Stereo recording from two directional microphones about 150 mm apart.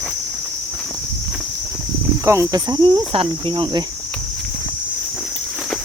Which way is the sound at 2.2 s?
20° right (ahead or behind).